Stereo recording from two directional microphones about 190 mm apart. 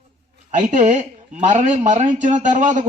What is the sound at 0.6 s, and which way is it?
Speech, 40° right (ahead or behind).